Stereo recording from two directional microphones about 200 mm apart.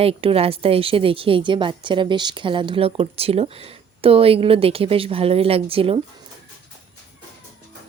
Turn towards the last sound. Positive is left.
turn(degrees=-30)  # may be behind; listen again after turning